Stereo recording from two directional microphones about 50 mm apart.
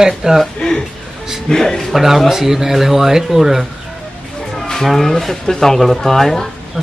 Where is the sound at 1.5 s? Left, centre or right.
Centre.